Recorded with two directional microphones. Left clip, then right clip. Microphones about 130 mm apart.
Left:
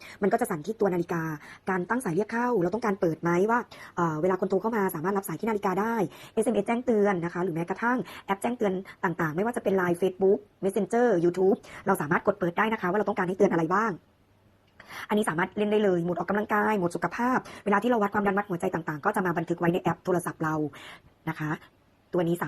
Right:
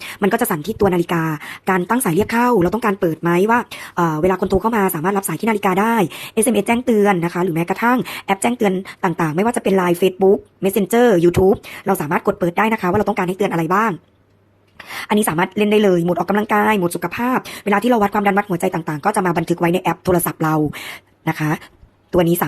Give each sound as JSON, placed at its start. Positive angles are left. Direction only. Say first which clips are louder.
{"t": 0.0, "sound": "a woman's voice", "louder": "right 8 dB", "side_deg": -40}
{"t": 2.8, "sound": "a woman's voice", "louder": "right 9 dB", "side_deg": -20}
{"t": 11.9, "sound": "a woman's voice", "louder": "right 7 dB", "side_deg": -30}
{"t": 14.9, "sound": "a woman's voice", "louder": "right 9 dB", "side_deg": -35}
{"t": 17.0, "sound": "speech", "louder": "right 7 dB", "side_deg": -15}
{"t": 17.7, "sound": "a woman's voice", "louder": "right 9 dB", "side_deg": -35}